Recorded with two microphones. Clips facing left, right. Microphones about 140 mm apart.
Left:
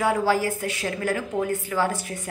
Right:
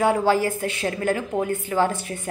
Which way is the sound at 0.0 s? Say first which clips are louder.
Right 2 dB; 25° right (ahead or behind).